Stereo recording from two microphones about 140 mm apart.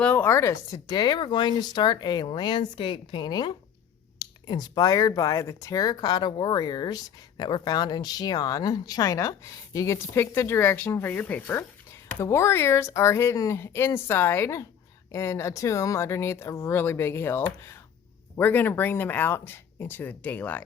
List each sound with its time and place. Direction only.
0.0 s speech: 15° left (ahead or behind)